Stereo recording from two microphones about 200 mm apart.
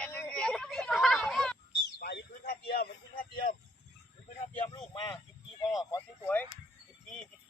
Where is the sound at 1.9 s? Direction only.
55° left (ahead or behind).